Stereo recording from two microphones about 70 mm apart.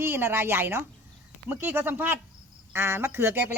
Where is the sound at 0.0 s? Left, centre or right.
Right.